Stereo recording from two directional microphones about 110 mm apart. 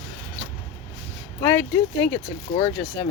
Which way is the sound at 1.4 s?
20° left (ahead or behind).